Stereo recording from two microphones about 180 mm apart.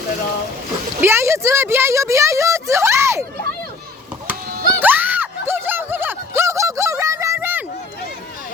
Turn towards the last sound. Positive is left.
turn(degrees=-15)  # may be behind; listen again after turning